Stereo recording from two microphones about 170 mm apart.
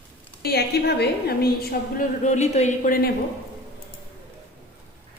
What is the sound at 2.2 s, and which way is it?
Speech, 40° left (ahead or behind).